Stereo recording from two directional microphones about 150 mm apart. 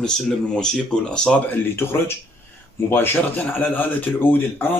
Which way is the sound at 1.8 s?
15° left (ahead or behind).